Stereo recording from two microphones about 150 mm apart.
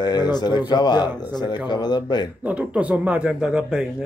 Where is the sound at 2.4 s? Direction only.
10° right (ahead or behind).